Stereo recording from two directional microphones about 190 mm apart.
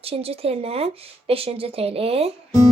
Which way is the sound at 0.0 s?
30° right (ahead or behind).